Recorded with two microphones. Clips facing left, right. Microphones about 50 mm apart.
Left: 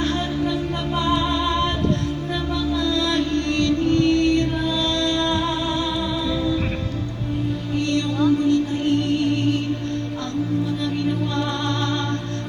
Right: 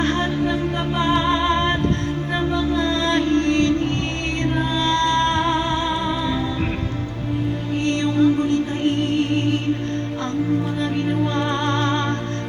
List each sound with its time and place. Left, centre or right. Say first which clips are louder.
0.9 s music: right 2 dB; right
2.7 s music: left 1 dB; right
8.2 s music: even; right
11.3 s music: right 3 dB; right